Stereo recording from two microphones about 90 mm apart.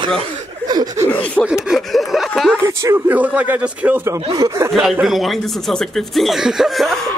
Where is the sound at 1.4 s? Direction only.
10° right (ahead or behind).